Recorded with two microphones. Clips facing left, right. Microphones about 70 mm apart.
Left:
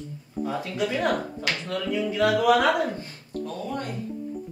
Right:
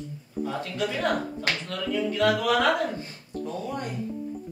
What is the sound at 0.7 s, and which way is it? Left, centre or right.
Speech, centre.